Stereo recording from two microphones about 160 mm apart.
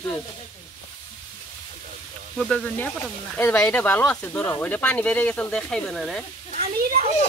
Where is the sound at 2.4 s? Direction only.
5° left (ahead or behind).